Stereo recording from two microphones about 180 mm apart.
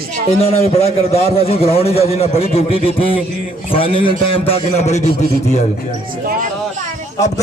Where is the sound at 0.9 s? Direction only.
35° left (ahead or behind).